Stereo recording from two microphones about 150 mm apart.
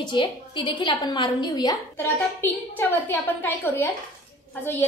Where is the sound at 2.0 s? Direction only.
15° left (ahead or behind).